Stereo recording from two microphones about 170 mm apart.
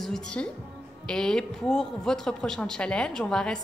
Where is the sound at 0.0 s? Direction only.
5° left (ahead or behind).